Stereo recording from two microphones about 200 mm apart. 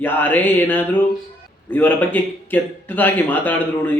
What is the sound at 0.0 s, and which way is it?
Speech, 10° left (ahead or behind).